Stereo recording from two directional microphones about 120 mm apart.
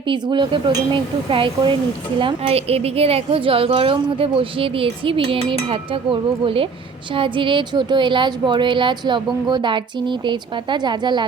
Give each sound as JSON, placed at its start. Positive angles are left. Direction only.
{"t": 0.1, "sound": "a woman's voice", "side_deg": -40}